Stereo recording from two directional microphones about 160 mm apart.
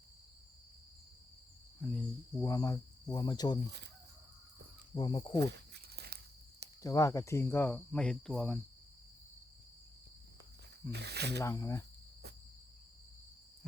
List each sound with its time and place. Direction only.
1.8 s cricket: 5° left (ahead or behind)
2.4 s cricket: 20° left (ahead or behind)
4.9 s cricket: 30° left (ahead or behind)
5.4 s walk: 90° right
6.8 s speech: 20° left (ahead or behind); by 8.5 s 5° left (ahead or behind)
10.9 s speech: 90° right
11.3 s cricket: 20° left (ahead or behind)